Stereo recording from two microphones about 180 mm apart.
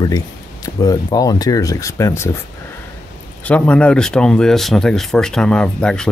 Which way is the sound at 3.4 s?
5° left (ahead or behind).